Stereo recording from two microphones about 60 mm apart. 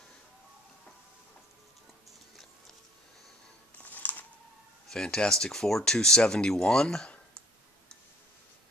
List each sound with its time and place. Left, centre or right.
3.8 s music: left
4.8 s speech: centre